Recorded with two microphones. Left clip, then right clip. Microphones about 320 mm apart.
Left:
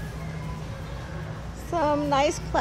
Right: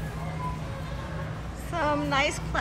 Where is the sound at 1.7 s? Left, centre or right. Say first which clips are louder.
Left 3 dB; centre.